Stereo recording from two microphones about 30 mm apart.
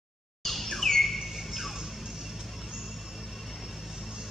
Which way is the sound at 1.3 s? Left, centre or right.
Centre.